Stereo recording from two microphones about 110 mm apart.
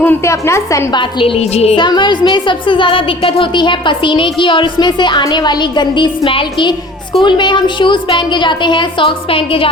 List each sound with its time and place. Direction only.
0.0 s a woman's voice: 20° left (ahead or behind)
0.9 s speech: 55° left (ahead or behind)
1.8 s speech: 45° left (ahead or behind)